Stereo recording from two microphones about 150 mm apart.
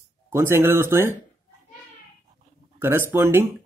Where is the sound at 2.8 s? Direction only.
15° right (ahead or behind).